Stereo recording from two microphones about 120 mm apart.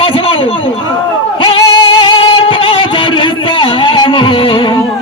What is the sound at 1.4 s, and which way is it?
Music, 45° left (ahead or behind).